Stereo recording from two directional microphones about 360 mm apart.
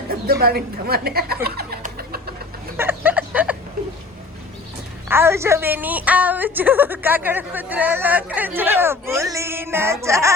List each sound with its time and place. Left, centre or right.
0.1 s a woman's voice: right
1.5 s bird: right
2.7 s a sound: centre
5.0 s a woman's voice: centre